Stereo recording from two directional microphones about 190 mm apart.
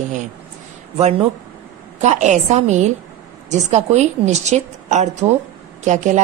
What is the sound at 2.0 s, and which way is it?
Speech, 40° right (ahead or behind).